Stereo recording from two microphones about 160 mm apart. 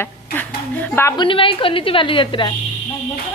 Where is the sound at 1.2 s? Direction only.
35° left (ahead or behind).